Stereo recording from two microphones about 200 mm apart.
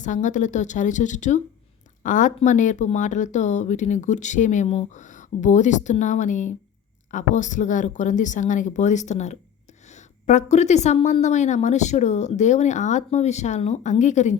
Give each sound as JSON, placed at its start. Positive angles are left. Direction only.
{"t": 0.0, "sound": "a woman's voice", "side_deg": 40}